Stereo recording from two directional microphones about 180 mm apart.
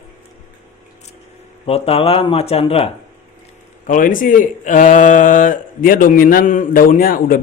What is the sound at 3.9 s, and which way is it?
Speech, 50° left (ahead or behind).